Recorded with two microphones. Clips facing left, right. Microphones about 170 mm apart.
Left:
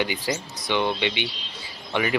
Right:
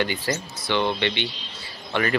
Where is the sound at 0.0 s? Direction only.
15° left (ahead or behind).